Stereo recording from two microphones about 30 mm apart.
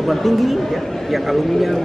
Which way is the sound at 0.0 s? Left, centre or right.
Centre.